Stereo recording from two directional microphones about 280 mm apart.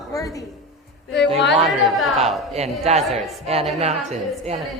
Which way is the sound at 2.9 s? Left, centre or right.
Right.